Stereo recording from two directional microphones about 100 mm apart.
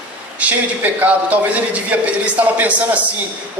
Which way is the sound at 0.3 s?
15° right (ahead or behind).